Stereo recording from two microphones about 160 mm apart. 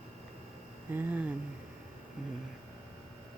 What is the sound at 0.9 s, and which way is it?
Speech, 10° right (ahead or behind).